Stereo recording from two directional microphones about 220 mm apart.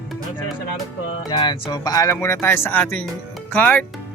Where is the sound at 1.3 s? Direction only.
20° left (ahead or behind).